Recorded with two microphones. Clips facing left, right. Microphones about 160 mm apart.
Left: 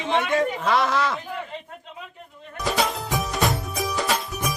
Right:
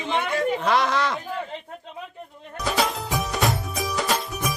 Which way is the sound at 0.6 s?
Centre (ahead or behind).